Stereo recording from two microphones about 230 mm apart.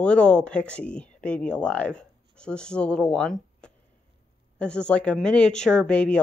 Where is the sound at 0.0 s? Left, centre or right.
Centre.